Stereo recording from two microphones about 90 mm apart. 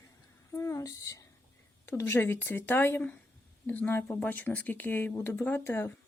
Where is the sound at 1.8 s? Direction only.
25° left (ahead or behind).